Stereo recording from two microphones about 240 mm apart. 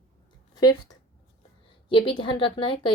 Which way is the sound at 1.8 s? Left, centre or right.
Left.